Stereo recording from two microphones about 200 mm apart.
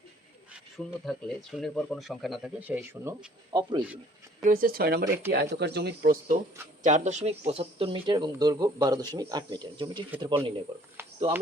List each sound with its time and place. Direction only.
1.0 s speech: centre (ahead or behind); by 3.8 s 20° right (ahead or behind)
4.4 s speech: 45° right (ahead or behind); by 10.5 s 25° right (ahead or behind)
11.0 s a sound: 10° right (ahead or behind)